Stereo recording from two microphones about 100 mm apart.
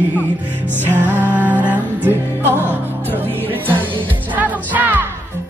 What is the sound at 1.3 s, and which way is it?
Music, 15° right (ahead or behind).